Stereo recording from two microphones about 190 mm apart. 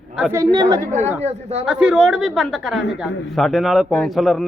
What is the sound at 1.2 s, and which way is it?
Speech, 35° right (ahead or behind).